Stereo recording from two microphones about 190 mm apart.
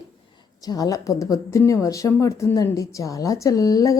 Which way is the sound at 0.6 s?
20° left (ahead or behind).